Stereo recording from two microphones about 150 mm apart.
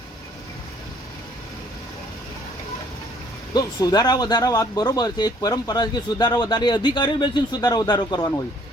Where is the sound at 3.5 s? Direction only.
25° left (ahead or behind).